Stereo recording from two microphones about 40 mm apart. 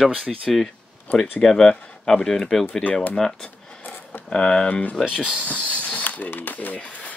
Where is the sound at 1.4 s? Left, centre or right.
Centre.